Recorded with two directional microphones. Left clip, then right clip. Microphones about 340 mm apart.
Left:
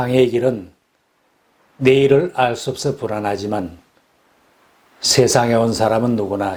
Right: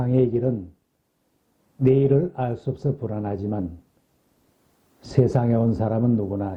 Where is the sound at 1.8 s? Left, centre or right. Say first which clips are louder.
Left 7 dB; centre.